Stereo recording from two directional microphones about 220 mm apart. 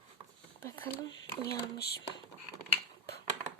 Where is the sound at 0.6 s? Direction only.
10° left (ahead or behind).